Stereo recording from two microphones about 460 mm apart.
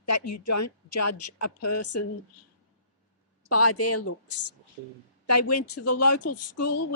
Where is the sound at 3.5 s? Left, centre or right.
Left.